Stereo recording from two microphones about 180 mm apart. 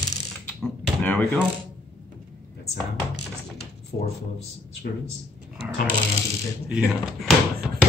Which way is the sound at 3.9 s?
50° left (ahead or behind).